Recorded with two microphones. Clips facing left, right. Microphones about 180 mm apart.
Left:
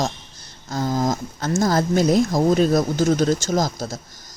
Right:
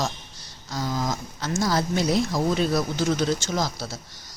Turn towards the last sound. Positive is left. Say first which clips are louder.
# left 5 dB
turn(degrees=45)  # may be behind; listen again after turning